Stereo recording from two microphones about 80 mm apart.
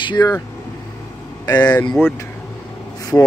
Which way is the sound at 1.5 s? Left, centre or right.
Left.